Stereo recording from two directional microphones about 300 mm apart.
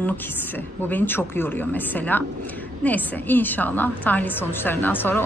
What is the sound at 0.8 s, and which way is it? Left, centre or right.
A woman's voice, centre.